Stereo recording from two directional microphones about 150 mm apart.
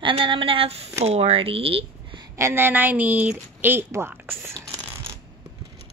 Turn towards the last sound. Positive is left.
turn(degrees=-15)  # may be behind; listen again after turning